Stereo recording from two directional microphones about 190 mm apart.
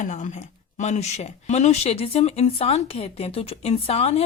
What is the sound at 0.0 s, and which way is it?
Speech, 40° left (ahead or behind).